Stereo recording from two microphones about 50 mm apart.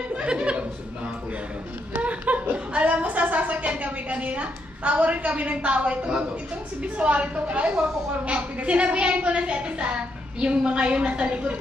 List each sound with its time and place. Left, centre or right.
0.2 s speech: right
2.0 s a woman's voice: right